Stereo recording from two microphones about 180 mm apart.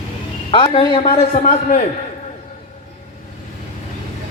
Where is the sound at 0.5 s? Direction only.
30° left (ahead or behind).